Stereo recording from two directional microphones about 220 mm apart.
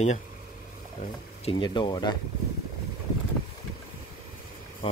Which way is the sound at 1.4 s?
20° left (ahead or behind).